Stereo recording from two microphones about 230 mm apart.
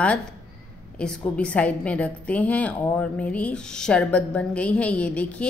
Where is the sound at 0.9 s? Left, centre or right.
Centre.